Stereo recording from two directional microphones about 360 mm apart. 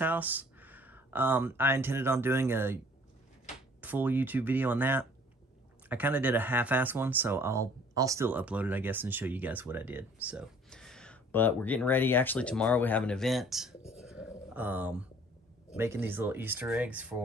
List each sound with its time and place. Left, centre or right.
0.0 s speech: centre
3.8 s speech: centre
14.0 s a sound: centre
15.7 s speech: centre